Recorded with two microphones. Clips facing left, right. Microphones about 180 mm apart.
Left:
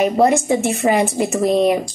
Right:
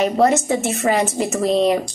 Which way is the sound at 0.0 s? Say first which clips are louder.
Left 1 dB; 15° left (ahead or behind).